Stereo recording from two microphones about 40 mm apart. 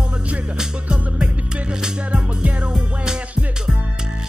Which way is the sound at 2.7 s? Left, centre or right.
Centre.